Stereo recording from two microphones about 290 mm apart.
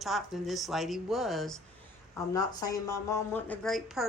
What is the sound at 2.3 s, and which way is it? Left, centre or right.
Speech, centre.